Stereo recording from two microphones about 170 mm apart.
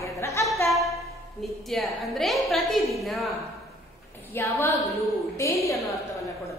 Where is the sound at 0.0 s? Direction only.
15° left (ahead or behind).